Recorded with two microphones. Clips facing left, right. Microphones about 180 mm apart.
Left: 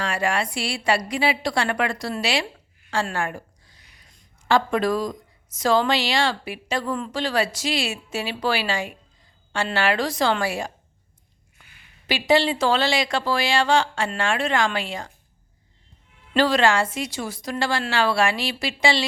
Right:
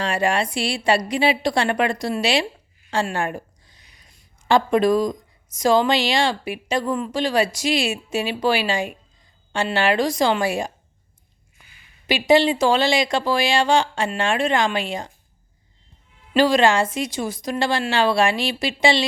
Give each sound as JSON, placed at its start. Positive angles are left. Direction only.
{"t": 0.0, "sound": "a woman's voice", "side_deg": -20}
{"t": 12.0, "sound": "speech", "side_deg": -15}
{"t": 16.3, "sound": "a woman's voice", "side_deg": -15}